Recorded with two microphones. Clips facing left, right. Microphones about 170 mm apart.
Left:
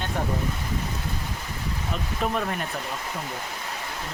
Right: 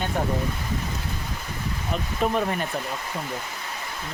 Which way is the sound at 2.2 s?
Centre (ahead or behind).